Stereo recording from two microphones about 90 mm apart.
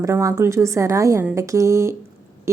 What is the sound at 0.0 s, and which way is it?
Speech, 35° right (ahead or behind).